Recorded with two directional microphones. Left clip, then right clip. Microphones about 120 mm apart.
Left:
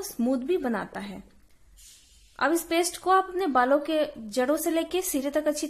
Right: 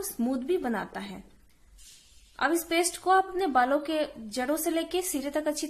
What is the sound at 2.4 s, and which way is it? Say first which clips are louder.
A woman's voice: left 2 dB; 25° left (ahead or behind).